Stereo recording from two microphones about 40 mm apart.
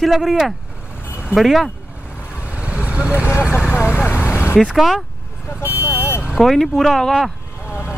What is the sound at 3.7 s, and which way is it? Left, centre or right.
Vehicle, left.